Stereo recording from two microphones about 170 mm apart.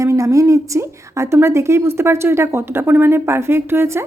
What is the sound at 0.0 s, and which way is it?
A woman's voice, 20° right (ahead or behind).